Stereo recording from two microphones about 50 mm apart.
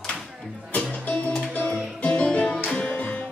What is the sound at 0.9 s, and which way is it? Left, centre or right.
Music, left.